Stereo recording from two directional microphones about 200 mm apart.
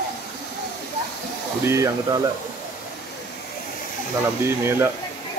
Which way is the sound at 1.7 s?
15° right (ahead or behind).